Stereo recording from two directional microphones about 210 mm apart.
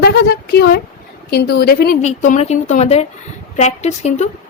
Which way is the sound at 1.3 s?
50° left (ahead or behind).